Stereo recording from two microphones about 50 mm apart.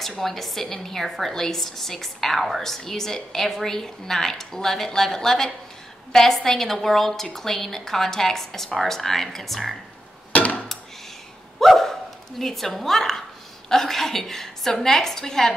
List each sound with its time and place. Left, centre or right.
0.2 s a woman's voice: centre
10.3 s hammer: left
11.6 s dog: centre
13.7 s a woman's voice: centre